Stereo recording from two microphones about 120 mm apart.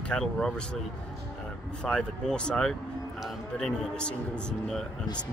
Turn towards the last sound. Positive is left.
turn(degrees=5)  # may be behind; listen again after turning